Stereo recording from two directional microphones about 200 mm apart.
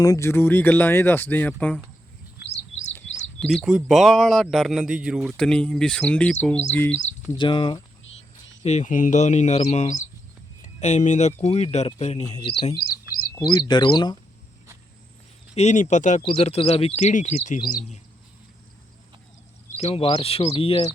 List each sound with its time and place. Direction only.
0.0 s speech: 15° left (ahead or behind)
3.4 s a man's voice: centre (ahead or behind)
7.3 s speech: 25° left (ahead or behind)
8.6 s speech: 35° left (ahead or behind)
12.7 s bird: 45° left (ahead or behind)
13.3 s speech: 20° left (ahead or behind)
15.5 s speech: 35° left (ahead or behind)
19.7 s speech: 30° left (ahead or behind)